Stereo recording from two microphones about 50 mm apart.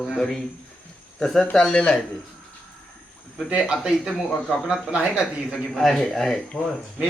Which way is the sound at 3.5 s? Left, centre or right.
Right.